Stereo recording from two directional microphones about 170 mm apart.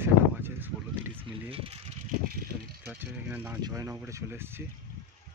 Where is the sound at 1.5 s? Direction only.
35° right (ahead or behind).